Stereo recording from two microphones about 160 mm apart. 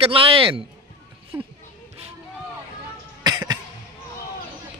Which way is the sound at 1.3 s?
15° right (ahead or behind).